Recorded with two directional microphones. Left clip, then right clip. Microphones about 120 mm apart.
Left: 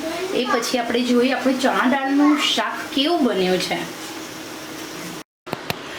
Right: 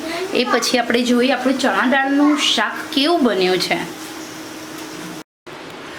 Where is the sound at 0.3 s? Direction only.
40° right (ahead or behind).